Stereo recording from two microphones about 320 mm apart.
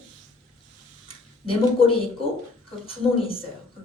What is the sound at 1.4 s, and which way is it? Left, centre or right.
Speech, centre.